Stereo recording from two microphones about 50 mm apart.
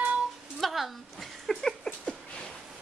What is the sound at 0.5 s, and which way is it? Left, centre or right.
Speech, centre.